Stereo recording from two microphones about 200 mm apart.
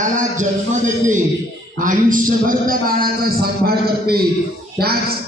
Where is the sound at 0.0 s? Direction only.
40° right (ahead or behind).